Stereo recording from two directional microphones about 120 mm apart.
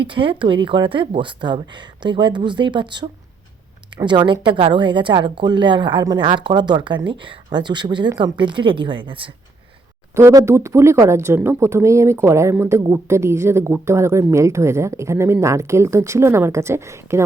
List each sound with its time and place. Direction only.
0.0 s speech: 45° right (ahead or behind)
10.2 s speech: 20° right (ahead or behind)